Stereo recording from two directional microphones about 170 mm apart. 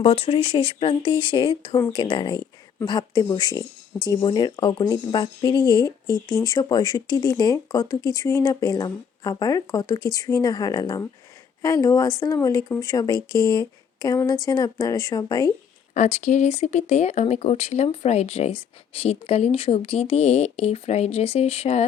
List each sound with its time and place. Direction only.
0.0 s speech: 35° left (ahead or behind)
16.0 s speech: 40° left (ahead or behind)